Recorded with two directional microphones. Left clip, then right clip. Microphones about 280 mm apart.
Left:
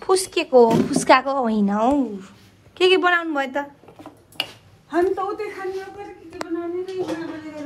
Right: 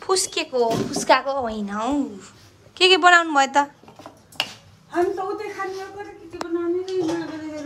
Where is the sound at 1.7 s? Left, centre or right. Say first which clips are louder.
Left 6 dB; centre.